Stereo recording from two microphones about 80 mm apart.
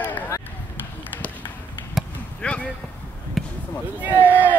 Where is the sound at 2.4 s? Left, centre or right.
Centre.